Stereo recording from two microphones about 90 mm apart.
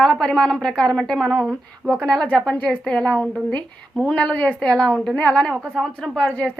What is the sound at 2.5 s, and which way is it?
A woman's voice, 20° left (ahead or behind).